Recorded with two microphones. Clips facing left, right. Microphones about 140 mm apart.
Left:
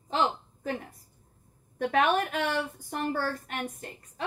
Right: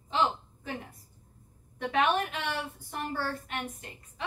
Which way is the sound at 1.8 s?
50° left (ahead or behind).